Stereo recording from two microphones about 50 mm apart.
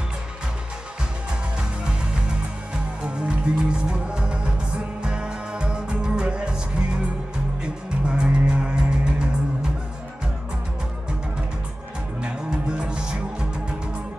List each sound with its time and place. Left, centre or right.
3.5 s music: centre
12.2 s music: centre